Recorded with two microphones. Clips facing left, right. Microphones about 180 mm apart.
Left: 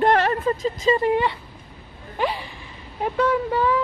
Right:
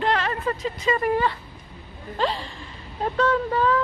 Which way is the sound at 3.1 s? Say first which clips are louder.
Left 1 dB; 10° left (ahead or behind).